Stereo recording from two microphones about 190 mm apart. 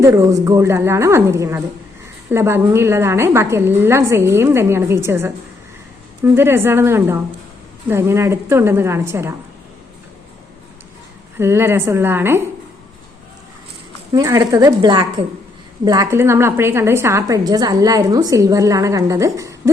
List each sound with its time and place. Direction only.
0.0 s a woman's voice: 15° right (ahead or behind)
11.3 s a woman's voice: 10° right (ahead or behind)
14.1 s a woman's voice: 20° right (ahead or behind)